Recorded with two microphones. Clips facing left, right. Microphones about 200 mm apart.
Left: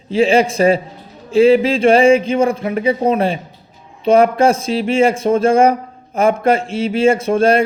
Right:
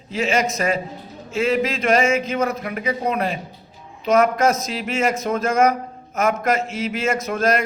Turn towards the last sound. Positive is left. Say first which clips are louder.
# left 7 dB
turn(degrees=30)  # may be behind; listen again after turning